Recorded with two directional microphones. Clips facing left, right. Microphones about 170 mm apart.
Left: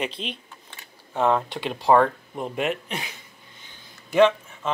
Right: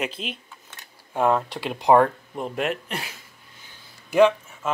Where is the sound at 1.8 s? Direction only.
20° right (ahead or behind).